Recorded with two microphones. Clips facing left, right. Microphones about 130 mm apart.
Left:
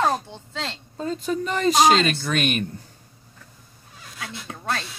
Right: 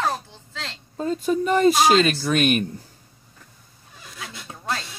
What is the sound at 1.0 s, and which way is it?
Speech, 10° right (ahead or behind).